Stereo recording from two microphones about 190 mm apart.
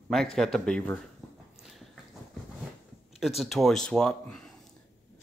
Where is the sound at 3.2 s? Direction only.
Centre (ahead or behind).